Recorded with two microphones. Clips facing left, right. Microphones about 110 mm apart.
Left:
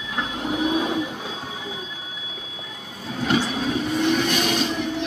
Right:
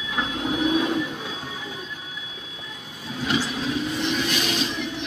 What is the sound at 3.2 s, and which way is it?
Vehicle, 50° left (ahead or behind).